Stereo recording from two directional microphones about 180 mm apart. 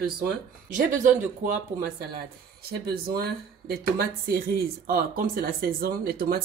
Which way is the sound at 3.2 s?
55° right (ahead or behind).